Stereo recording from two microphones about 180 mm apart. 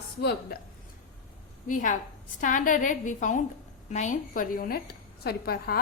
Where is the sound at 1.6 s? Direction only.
45° left (ahead or behind).